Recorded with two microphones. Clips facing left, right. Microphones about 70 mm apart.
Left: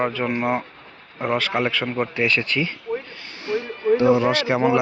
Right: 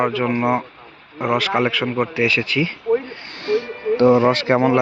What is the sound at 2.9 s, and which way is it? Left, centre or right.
Wheeze, right.